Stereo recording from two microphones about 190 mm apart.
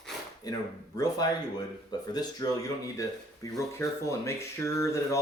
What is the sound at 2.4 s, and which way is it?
Speech, 20° left (ahead or behind).